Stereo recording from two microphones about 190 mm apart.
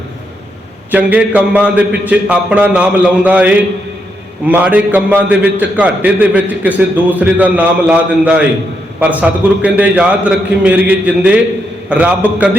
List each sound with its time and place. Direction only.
0.9 s a man's voice: 10° right (ahead or behind)